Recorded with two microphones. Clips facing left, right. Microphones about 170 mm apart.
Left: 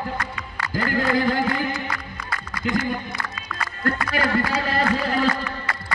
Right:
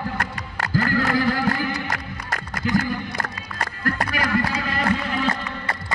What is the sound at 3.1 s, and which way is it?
Music, 40° right (ahead or behind).